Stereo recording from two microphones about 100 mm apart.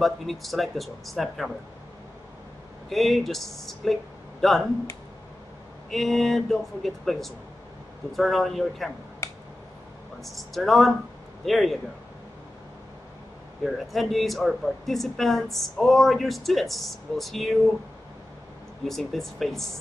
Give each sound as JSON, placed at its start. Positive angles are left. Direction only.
{"t": 0.0, "sound": "speech", "side_deg": 0}
{"t": 2.9, "sound": "speech", "side_deg": 0}
{"t": 5.9, "sound": "speech", "side_deg": 0}
{"t": 9.2, "sound": "a sound", "side_deg": 30}
{"t": 10.2, "sound": "speech", "side_deg": 0}
{"t": 13.9, "sound": "speech", "side_deg": 0}
{"t": 18.9, "sound": "speech", "side_deg": 0}